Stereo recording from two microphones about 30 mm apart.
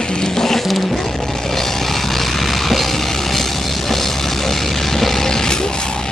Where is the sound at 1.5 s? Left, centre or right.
Centre.